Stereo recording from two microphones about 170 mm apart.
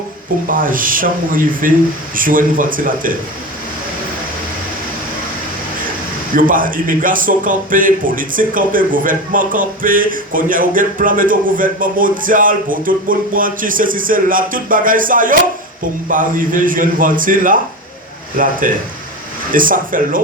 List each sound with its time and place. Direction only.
0.4 s a man's voice: 55° right (ahead or behind)
6.3 s a man's voice: 55° right (ahead or behind)
18.6 s a man's voice: 50° right (ahead or behind)